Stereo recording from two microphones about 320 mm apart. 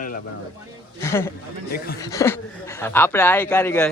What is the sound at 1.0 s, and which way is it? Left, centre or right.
Speech, centre.